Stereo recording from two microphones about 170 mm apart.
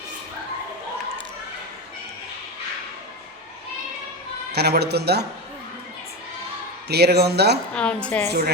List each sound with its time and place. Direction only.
4.5 s speech: 75° right (ahead or behind)
6.8 s speech: 75° right (ahead or behind)
7.8 s a woman's voice: 5° left (ahead or behind)
8.3 s speech: 70° right (ahead or behind)